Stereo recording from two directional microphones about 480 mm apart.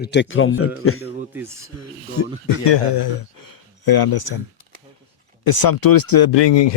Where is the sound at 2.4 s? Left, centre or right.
Left.